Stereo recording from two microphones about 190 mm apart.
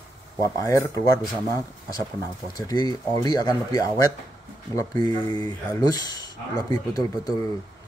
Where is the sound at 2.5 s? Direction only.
20° left (ahead or behind).